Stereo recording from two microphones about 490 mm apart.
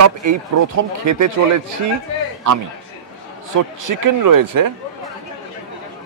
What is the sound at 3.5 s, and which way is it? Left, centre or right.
Speech, right.